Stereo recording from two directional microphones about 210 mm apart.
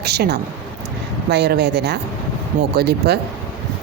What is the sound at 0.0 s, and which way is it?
A woman's voice, 50° right (ahead or behind).